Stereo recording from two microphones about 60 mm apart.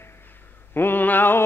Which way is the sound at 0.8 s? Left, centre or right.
Left.